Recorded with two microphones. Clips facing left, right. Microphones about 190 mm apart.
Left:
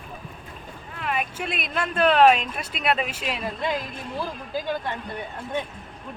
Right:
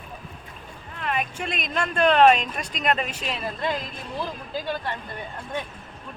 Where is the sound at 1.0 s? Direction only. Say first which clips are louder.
Even; 5° left (ahead or behind).